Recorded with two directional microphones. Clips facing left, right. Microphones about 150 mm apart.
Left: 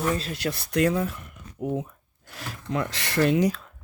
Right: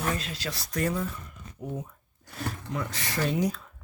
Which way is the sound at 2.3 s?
90° left.